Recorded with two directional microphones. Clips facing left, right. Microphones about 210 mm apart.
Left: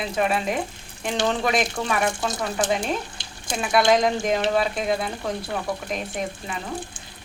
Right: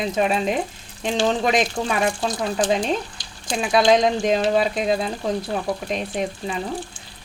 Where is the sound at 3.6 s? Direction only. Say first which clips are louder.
Right 2 dB; 20° right (ahead or behind).